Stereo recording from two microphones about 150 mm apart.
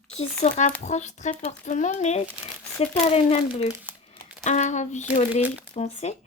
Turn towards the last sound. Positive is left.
turn(degrees=45)  # may be behind; listen again after turning